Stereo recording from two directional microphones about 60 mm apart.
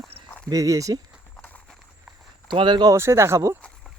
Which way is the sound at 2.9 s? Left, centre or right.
Right.